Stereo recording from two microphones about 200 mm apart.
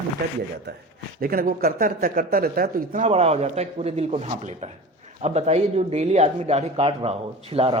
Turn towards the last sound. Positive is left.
turn(degrees=-30)  # may be behind; listen again after turning